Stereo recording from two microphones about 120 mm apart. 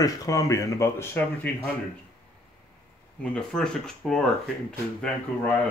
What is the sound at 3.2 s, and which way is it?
Speech, 5° left (ahead or behind).